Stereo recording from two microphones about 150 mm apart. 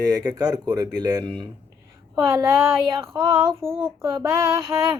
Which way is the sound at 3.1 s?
30° right (ahead or behind).